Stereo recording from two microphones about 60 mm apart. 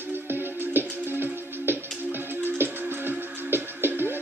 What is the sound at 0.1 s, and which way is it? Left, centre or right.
Music, right.